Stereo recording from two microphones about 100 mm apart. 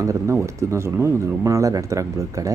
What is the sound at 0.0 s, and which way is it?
Speech, 30° right (ahead or behind).